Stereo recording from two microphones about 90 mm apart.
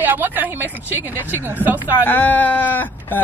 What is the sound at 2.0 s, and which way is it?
Speech, 20° left (ahead or behind).